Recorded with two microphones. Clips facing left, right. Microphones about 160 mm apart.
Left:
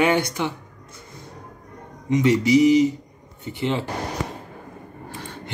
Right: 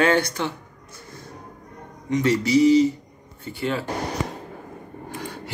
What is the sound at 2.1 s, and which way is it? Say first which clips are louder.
Speech: left 2 dB; 20° left (ahead or behind).